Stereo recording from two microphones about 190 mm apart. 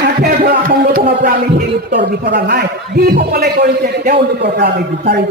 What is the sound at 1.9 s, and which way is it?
A man's voice, 65° right (ahead or behind).